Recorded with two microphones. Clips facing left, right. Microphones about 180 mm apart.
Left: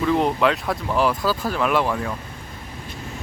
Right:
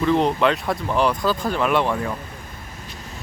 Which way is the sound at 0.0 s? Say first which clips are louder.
Right 1 dB; 5° left (ahead or behind).